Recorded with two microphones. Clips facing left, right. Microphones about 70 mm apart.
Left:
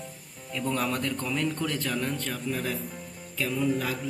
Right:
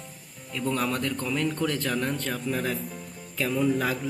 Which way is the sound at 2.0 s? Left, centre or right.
Centre.